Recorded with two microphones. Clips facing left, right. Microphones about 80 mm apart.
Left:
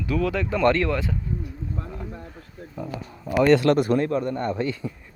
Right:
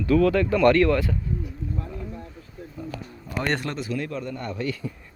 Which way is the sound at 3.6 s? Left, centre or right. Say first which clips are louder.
Left 12 dB; left.